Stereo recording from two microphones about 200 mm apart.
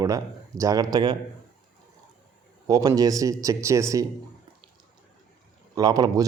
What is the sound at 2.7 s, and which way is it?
Speech, 20° right (ahead or behind).